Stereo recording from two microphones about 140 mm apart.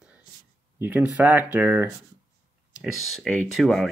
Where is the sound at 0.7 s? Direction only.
15° right (ahead or behind).